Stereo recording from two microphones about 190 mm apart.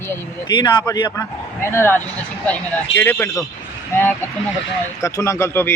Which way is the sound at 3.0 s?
10° left (ahead or behind).